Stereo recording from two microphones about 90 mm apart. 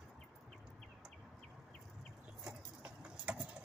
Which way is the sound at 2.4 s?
10° right (ahead or behind).